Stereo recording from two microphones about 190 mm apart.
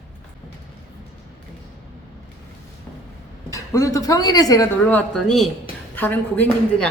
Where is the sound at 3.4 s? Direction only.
15° left (ahead or behind).